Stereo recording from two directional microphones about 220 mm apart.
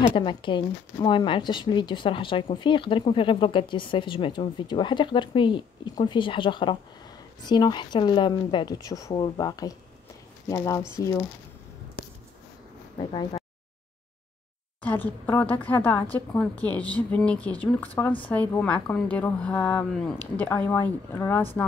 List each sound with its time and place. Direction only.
0.0 s a woman's voice: 25° left (ahead or behind)
12.9 s speech: 20° left (ahead or behind)
14.8 s a woman's voice: 10° left (ahead or behind)